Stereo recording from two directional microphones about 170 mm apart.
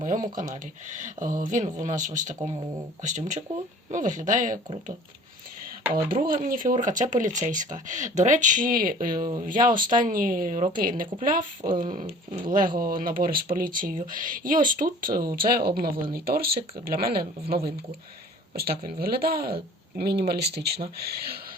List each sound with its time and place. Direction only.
0.0 s speech: 50° right (ahead or behind)
6.1 s speech: 55° right (ahead or behind)